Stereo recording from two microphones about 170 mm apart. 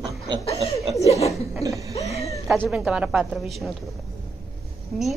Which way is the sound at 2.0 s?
40° left (ahead or behind).